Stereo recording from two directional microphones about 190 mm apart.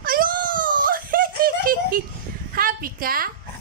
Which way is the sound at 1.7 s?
50° right (ahead or behind).